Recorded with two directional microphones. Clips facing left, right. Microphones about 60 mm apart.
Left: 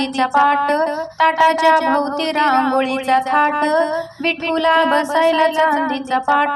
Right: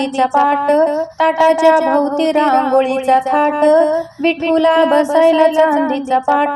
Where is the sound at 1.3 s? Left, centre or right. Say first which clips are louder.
Right 3 dB; centre.